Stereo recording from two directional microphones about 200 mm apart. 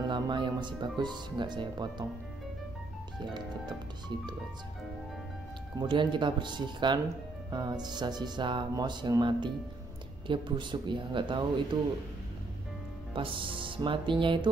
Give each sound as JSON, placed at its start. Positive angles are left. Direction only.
{"t": 0.0, "sound": "speech", "side_deg": -20}
{"t": 5.8, "sound": "speech", "side_deg": -25}
{"t": 13.1, "sound": "speech", "side_deg": -25}